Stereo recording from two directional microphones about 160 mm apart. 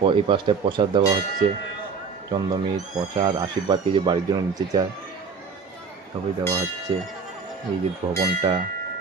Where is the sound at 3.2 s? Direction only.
30° right (ahead or behind).